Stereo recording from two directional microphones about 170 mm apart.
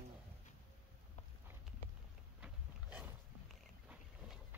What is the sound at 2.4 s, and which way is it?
Dog, 10° right (ahead or behind).